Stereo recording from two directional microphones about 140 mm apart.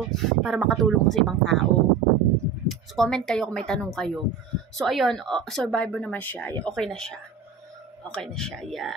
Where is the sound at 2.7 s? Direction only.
5° left (ahead or behind).